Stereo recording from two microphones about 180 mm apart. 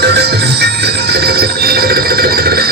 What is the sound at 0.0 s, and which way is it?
Music, 65° right (ahead or behind).